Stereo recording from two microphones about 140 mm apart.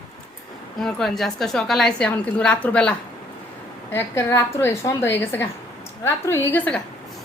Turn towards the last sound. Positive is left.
turn(degrees=10)  # may be behind; listen again after turning